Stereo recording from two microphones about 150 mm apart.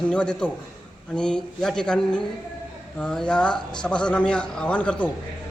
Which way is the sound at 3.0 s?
5° left (ahead or behind).